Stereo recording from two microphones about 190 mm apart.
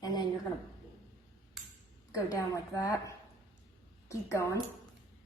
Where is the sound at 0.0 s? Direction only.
20° left (ahead or behind).